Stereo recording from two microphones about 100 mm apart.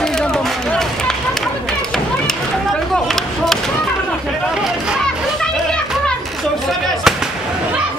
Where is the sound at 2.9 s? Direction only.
5° left (ahead or behind).